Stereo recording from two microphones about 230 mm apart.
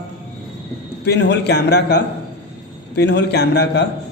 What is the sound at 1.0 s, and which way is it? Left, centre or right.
A man's voice, left.